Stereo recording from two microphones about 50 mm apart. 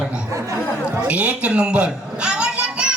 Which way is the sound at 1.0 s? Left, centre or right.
Right.